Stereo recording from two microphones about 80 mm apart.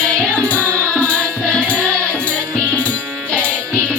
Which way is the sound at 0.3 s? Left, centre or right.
Centre.